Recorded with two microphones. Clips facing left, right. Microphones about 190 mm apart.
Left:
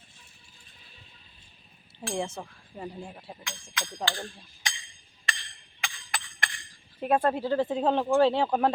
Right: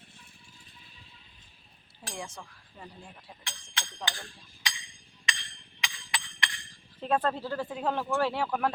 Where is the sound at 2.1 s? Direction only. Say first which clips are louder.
Left 9 dB; 25° left (ahead or behind).